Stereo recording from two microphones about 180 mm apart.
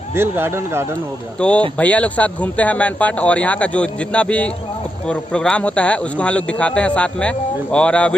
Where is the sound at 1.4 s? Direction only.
5° left (ahead or behind).